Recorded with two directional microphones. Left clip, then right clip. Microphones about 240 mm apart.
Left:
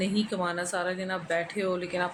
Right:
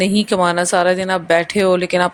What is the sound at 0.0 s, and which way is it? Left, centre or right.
Speech, right.